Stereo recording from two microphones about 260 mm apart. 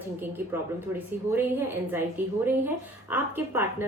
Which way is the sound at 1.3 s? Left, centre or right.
Centre.